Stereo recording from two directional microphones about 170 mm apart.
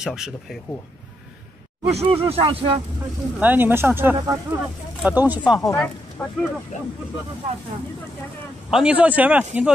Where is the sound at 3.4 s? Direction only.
10° right (ahead or behind).